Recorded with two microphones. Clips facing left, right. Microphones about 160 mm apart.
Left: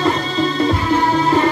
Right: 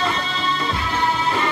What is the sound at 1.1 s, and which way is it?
Music, 40° left (ahead or behind).